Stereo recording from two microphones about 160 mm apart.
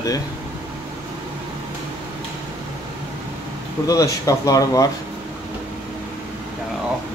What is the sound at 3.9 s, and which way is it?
Speech, 20° left (ahead or behind).